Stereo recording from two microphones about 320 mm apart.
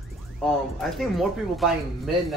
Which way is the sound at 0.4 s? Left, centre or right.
Centre.